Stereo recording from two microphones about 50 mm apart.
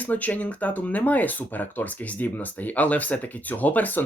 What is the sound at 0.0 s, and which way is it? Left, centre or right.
Speech, left.